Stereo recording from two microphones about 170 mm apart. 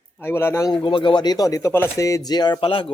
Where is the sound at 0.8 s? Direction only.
30° left (ahead or behind).